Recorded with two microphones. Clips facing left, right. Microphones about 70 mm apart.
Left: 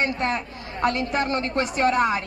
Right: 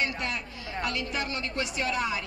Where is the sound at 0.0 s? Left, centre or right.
Left.